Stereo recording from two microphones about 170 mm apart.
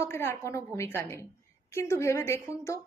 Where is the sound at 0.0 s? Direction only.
15° left (ahead or behind).